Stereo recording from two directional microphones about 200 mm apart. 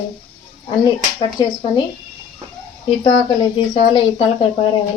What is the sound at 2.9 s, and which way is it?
Speech, 25° left (ahead or behind).